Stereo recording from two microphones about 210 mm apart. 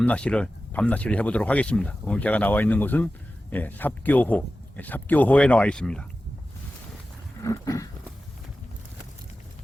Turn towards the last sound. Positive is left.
turn(degrees=15)  # may be behind; listen again after turning